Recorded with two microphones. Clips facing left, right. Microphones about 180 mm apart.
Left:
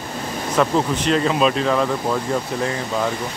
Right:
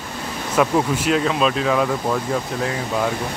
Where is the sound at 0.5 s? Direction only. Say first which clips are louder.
Right 1 dB; 5° right (ahead or behind).